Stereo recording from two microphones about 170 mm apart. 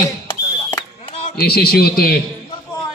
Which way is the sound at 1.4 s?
65° left (ahead or behind).